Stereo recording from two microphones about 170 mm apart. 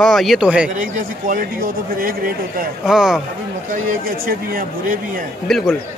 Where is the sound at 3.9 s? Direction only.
55° right (ahead or behind).